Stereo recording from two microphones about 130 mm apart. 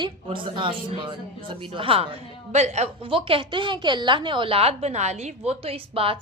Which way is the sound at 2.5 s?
60° right (ahead or behind).